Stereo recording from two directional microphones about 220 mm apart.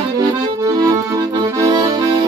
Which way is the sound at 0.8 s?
15° right (ahead or behind).